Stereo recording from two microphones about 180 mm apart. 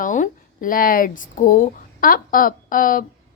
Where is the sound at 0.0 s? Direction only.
45° left (ahead or behind).